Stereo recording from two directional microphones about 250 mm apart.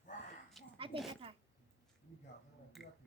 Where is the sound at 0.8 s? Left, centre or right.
Right.